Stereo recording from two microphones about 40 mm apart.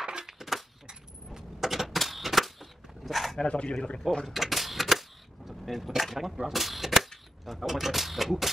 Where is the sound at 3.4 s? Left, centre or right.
Left.